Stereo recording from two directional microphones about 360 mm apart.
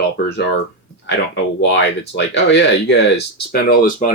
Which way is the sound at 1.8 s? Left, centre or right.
Left.